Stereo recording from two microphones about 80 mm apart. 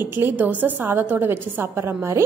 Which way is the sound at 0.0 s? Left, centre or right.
Right.